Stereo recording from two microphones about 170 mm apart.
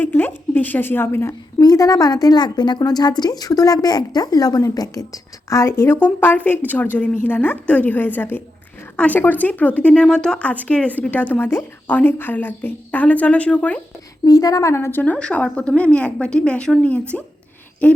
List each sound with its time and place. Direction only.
0.0 s a woman's voice: 10° left (ahead or behind)
14.3 s speech: 20° left (ahead or behind)